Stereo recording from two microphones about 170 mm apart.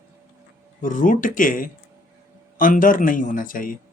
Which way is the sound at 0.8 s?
50° left (ahead or behind).